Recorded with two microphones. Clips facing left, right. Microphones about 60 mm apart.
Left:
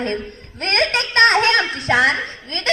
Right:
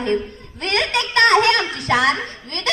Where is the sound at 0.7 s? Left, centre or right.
Left.